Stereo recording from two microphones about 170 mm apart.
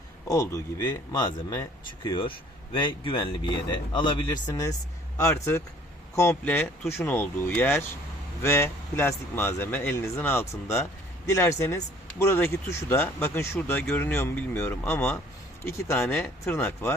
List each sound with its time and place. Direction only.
0.3 s speech: 20° left (ahead or behind)